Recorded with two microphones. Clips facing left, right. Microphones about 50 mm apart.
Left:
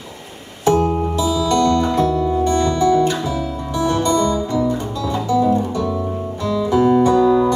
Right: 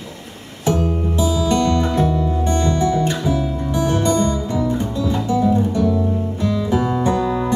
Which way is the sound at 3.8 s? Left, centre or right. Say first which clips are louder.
Left 2 dB; left.